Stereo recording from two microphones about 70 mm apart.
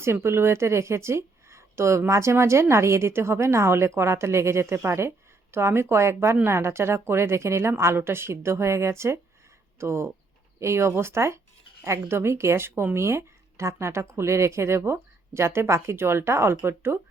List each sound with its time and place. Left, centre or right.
0.0 s speech: right